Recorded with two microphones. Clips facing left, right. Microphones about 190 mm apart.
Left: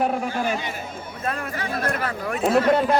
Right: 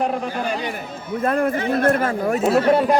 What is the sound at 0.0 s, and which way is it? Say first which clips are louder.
Speech: even; 5° left (ahead or behind).